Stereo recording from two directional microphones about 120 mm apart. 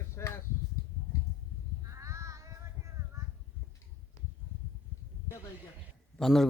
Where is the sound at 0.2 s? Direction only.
20° left (ahead or behind).